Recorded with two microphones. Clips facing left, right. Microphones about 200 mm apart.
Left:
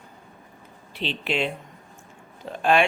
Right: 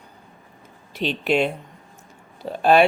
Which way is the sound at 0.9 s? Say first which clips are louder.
Right 6 dB; 45° right (ahead or behind).